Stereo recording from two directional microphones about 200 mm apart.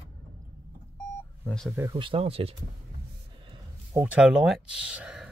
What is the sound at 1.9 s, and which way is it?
Speech, 25° right (ahead or behind).